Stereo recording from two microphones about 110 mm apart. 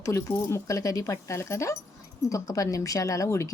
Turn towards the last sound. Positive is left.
turn(degrees=30)  # may be behind; listen again after turning